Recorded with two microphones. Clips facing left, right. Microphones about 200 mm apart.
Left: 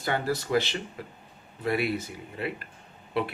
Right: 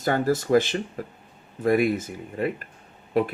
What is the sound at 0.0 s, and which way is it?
Speech, 45° right (ahead or behind).